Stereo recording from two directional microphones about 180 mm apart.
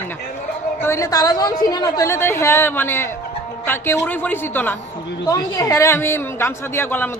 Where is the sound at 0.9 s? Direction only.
20° left (ahead or behind).